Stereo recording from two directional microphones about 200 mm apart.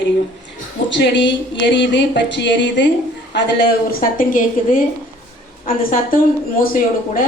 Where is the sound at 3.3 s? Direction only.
50° left (ahead or behind).